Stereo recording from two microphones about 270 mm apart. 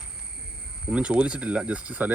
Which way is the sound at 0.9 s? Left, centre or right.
Centre.